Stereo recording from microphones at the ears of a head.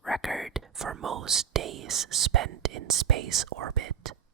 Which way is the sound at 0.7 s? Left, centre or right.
Right.